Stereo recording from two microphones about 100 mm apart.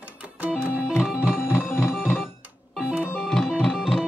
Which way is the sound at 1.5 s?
20° left (ahead or behind).